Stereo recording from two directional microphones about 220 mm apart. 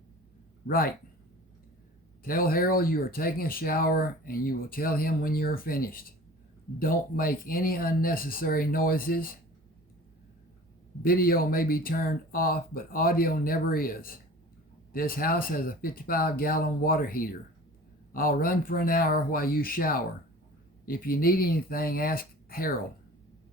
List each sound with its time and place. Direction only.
0.7 s speech: 40° left (ahead or behind)
2.2 s speech: 40° left (ahead or behind)
11.0 s speech: 40° left (ahead or behind)